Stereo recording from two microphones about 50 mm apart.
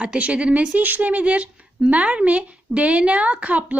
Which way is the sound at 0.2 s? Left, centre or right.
Right.